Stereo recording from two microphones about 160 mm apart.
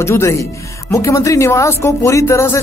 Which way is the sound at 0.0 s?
15° left (ahead or behind).